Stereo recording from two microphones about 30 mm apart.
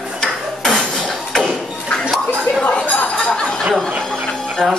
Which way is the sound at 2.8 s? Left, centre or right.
Left.